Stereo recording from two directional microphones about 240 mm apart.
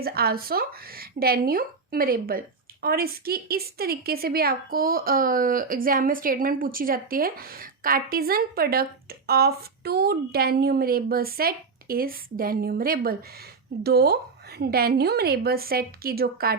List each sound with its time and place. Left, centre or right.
0.0 s a woman's voice: right